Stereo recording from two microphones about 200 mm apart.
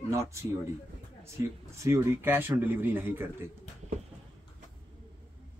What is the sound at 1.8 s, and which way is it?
Speech, 10° right (ahead or behind).